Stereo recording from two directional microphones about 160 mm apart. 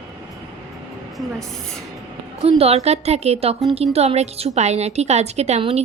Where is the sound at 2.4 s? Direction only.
40° right (ahead or behind).